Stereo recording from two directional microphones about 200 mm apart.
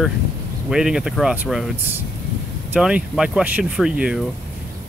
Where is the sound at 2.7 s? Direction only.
5° right (ahead or behind).